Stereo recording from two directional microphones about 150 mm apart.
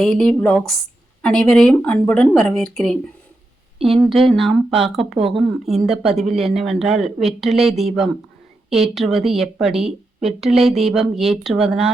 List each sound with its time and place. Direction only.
0.0 s speech: centre (ahead or behind)
3.8 s speech: 40° right (ahead or behind)
4.3 s speech: centre (ahead or behind)
5.1 s speech: 40° right (ahead or behind)
5.4 s speech: centre (ahead or behind)